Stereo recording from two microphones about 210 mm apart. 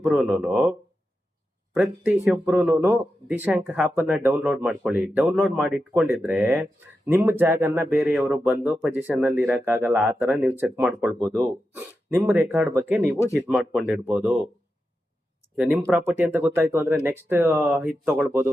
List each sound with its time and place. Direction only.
0.0 s speech: 5° right (ahead or behind)
11.8 s speech: 10° right (ahead or behind)
15.5 s speech: 10° right (ahead or behind)